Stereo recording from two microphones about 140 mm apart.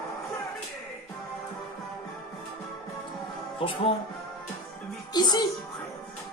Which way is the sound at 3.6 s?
40° left (ahead or behind).